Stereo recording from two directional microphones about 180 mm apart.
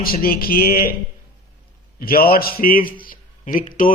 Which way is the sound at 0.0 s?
55° left (ahead or behind).